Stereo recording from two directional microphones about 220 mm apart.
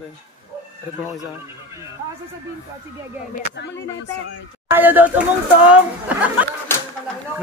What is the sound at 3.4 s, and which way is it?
Speech, 50° left (ahead or behind).